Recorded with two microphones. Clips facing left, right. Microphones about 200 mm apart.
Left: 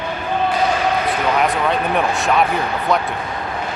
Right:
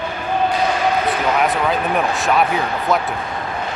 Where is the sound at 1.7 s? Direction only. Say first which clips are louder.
Even; centre (ahead or behind).